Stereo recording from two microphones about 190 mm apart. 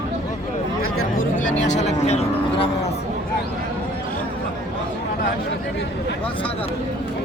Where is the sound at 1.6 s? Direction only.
40° left (ahead or behind).